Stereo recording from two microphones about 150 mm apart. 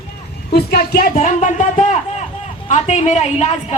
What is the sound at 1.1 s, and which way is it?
Music, 55° left (ahead or behind).